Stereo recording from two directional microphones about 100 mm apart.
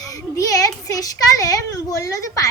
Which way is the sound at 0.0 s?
35° left (ahead or behind).